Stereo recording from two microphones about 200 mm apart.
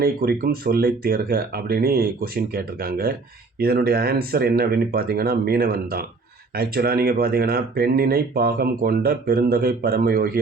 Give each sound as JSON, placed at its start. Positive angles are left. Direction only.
{"t": 0.0, "sound": "speech", "side_deg": -50}